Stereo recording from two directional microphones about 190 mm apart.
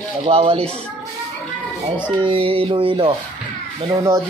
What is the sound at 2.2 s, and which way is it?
Speech, 30° right (ahead or behind).